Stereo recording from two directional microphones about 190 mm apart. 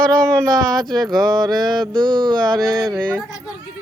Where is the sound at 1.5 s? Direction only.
Centre (ahead or behind).